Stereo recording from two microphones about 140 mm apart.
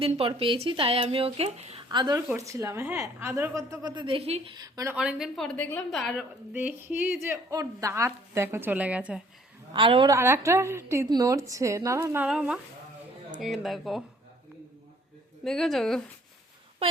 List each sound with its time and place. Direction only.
0.0 s speech: 40° right (ahead or behind)
1.9 s a woman's voice: 30° right (ahead or behind)
3.9 s speech: 40° right (ahead or behind)
4.5 s a woman's voice: 25° right (ahead or behind)
4.9 s speech: 5° right (ahead or behind)
6.5 s a woman's voice: 10° right (ahead or behind)
9.7 s speech: 35° right (ahead or behind)
10.1 s a woman's voice: 20° right (ahead or behind)
12.3 s speech: 5° right (ahead or behind)
15.4 s speech: centre (ahead or behind)